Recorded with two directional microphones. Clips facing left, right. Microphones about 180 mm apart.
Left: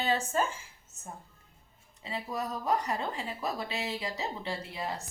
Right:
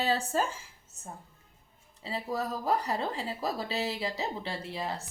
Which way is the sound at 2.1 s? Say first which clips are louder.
Right 2 dB; 35° right (ahead or behind).